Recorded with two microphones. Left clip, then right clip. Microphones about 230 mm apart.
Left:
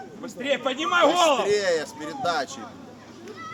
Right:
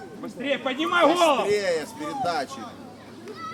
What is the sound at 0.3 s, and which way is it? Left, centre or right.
Speech, left.